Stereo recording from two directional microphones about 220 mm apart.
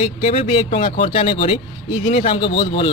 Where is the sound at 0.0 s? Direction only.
25° left (ahead or behind).